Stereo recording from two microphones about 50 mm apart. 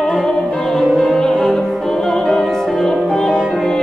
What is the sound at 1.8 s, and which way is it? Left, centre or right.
Opera, centre.